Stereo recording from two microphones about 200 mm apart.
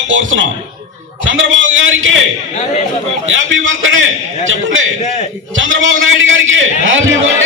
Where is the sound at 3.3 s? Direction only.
70° right (ahead or behind).